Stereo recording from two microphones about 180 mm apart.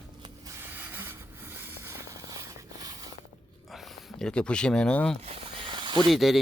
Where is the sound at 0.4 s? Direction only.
10° right (ahead or behind).